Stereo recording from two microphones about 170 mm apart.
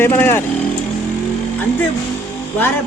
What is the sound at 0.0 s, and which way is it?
Speech, 15° left (ahead or behind).